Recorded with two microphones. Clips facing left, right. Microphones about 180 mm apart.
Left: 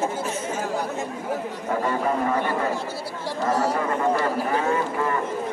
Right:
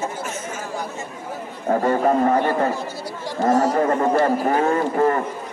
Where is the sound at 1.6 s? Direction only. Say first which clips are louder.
Right 7 dB; 40° right (ahead or behind).